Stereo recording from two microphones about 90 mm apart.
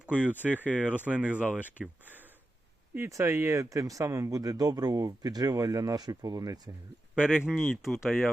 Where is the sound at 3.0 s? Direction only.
35° right (ahead or behind).